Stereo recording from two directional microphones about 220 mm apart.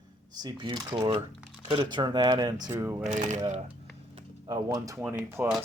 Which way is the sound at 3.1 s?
35° right (ahead or behind).